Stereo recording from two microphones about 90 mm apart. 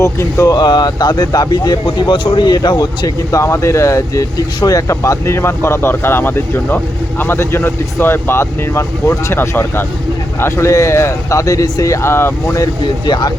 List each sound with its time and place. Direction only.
0.0 s speech: 35° left (ahead or behind); by 3.1 s 55° left (ahead or behind)
3.3 s speech: 35° left (ahead or behind)
12.0 s speech: 25° left (ahead or behind)
13.1 s speech: 55° left (ahead or behind)